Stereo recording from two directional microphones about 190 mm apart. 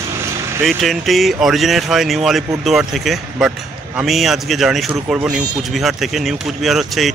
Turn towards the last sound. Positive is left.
turn(degrees=0)  # may be behind; listen again after turning